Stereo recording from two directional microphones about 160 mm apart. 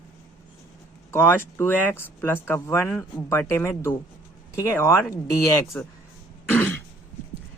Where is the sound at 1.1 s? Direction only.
15° left (ahead or behind).